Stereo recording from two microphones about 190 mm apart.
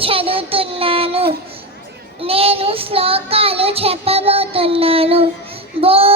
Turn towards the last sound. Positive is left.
turn(degrees=-30)  # may be behind; listen again after turning